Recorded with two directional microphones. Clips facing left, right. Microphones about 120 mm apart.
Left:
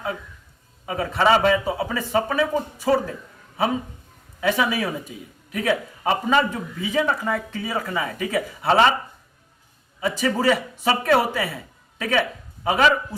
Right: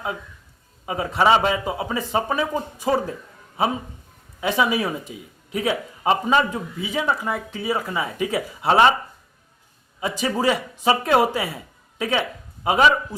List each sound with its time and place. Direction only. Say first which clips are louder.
0.9 s speech: right 1 dB; 15° right (ahead or behind)
4.4 s speech: right 1 dB; 20° right (ahead or behind)
10.0 s a woman's voice: left 1 dB; 20° right (ahead or behind)